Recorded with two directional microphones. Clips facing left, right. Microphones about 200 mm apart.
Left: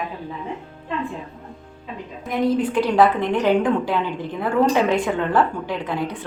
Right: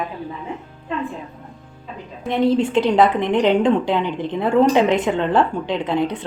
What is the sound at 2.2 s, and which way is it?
A woman's voice, 25° right (ahead or behind).